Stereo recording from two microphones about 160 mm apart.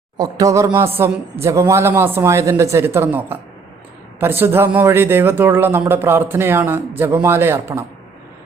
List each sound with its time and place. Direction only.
0.2 s a woman's voice: 20° right (ahead or behind)